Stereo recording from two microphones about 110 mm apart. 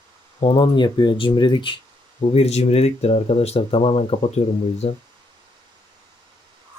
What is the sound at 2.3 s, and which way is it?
Speech, 70° left (ahead or behind).